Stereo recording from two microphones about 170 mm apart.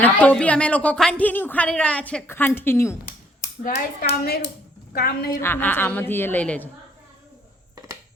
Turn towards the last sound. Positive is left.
turn(degrees=10)  # may be behind; listen again after turning